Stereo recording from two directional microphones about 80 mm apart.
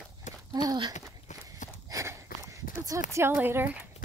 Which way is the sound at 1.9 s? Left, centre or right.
Right.